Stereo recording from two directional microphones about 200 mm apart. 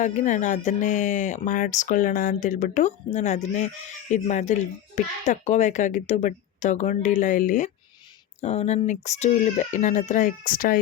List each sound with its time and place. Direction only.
0.0 s speech: 40° left (ahead or behind)